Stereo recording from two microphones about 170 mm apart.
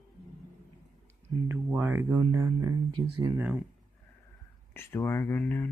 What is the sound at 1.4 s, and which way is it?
Speech, 15° right (ahead or behind).